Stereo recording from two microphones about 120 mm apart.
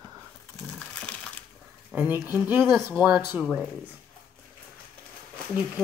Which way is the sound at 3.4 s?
5° left (ahead or behind).